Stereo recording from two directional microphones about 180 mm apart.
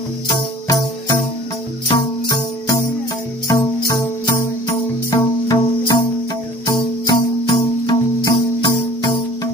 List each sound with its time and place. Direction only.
1.9 s music: 25° left (ahead or behind)